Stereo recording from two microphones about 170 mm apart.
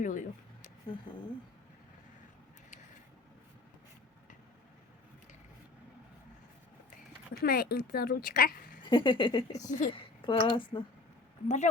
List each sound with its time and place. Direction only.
0.0 s speech: 50° left (ahead or behind)
7.4 s speech: 65° left (ahead or behind)
8.9 s speech: 30° left (ahead or behind)
9.6 s speech: 45° left (ahead or behind)
9.9 s a woman's voice: 30° left (ahead or behind)
11.4 s speech: 45° left (ahead or behind)